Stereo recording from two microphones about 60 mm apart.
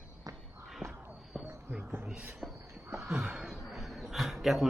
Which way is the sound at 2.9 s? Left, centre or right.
Centre.